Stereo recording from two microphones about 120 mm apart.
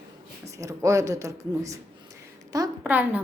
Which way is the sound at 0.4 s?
25° right (ahead or behind).